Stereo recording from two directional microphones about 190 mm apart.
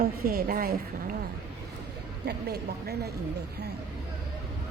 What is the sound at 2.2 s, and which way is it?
Speech, 55° right (ahead or behind).